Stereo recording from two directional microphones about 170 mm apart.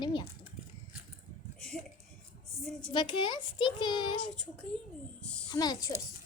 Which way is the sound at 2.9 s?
30° left (ahead or behind).